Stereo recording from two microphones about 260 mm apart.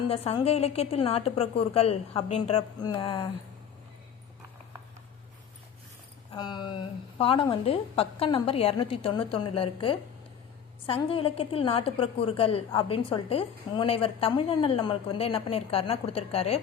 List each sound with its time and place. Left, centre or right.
0.1 s a woman's voice: left
6.3 s a woman's voice: centre